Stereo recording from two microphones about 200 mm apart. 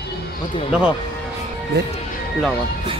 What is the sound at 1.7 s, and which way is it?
Speech, 55° right (ahead or behind).